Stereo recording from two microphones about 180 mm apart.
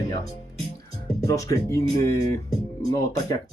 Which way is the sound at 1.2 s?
20° left (ahead or behind).